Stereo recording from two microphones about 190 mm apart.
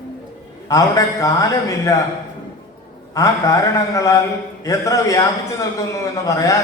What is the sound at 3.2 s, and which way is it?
A man's voice, 15° left (ahead or behind).